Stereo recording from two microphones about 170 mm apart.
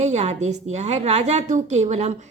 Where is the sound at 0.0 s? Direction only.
40° right (ahead or behind).